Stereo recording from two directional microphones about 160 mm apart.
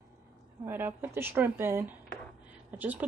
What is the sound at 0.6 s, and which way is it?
Speech, 15° right (ahead or behind).